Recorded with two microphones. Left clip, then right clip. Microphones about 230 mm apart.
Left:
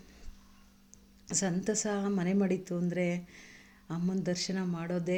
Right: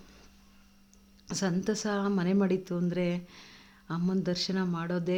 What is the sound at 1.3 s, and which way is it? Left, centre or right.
Speech, centre.